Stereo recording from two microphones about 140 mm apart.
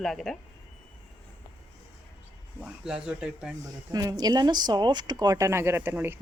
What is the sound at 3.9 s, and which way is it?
Speech, 25° right (ahead or behind).